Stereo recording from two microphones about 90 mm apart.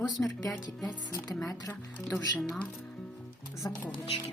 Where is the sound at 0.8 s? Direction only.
45° left (ahead or behind).